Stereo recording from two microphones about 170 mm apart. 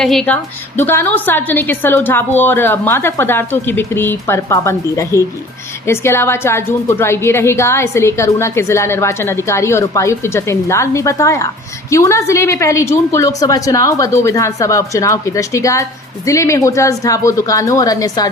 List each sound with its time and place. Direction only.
0.0 s a woman's voice: 5° left (ahead or behind); by 18.3 s 20° left (ahead or behind)